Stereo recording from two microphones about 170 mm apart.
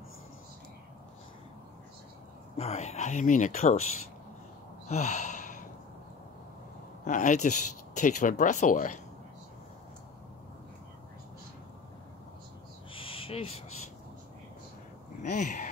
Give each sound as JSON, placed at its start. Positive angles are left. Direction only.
{"t": 2.5, "sound": "speech", "side_deg": 40}
{"t": 4.8, "sound": "sigh", "side_deg": 45}
{"t": 7.1, "sound": "speech", "side_deg": 50}
{"t": 12.9, "sound": "owl", "side_deg": 30}
{"t": 15.2, "sound": "speech", "side_deg": 45}